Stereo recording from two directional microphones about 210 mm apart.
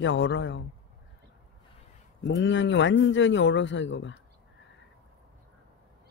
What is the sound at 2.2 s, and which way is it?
Speech, 60° left (ahead or behind).